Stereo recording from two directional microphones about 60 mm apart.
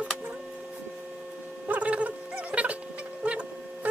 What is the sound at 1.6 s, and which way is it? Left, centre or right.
Gargling, right.